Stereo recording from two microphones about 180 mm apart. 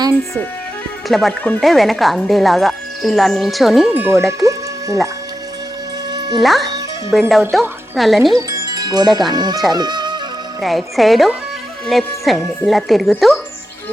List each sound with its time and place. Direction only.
1.0 s speech: centre (ahead or behind); by 4.6 s 15° right (ahead or behind)
6.1 s music: 25° right (ahead or behind)
6.4 s speech: centre (ahead or behind)
8.4 s speech: 20° right (ahead or behind)
10.6 s speech: centre (ahead or behind)